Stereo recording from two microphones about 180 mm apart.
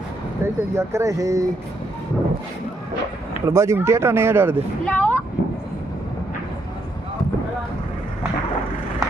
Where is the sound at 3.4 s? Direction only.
15° right (ahead or behind).